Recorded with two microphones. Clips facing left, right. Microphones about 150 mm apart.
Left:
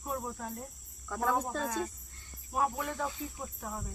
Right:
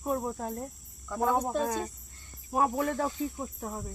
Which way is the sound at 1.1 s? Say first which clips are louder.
Right 4 dB; 20° right (ahead or behind).